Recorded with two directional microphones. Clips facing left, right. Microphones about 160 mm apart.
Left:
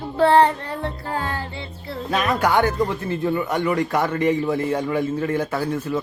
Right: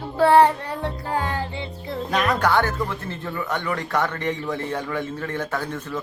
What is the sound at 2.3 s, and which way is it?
Speech, 15° left (ahead or behind).